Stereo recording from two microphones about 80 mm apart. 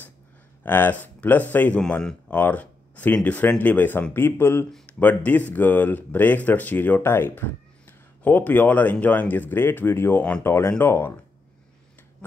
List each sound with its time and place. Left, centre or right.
0.7 s speech: left
4.8 s speech: centre